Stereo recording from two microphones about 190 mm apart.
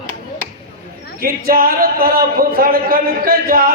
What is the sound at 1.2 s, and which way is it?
A man's voice, 50° right (ahead or behind).